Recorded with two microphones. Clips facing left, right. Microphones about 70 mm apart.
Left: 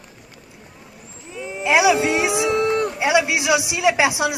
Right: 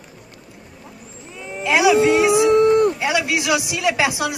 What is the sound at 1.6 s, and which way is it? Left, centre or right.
A man's voice, centre.